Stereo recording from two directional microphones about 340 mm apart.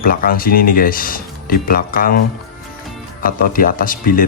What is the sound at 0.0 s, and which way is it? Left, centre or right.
Speech, left.